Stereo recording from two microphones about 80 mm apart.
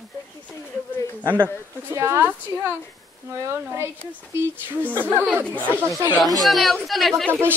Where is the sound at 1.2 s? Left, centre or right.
Right.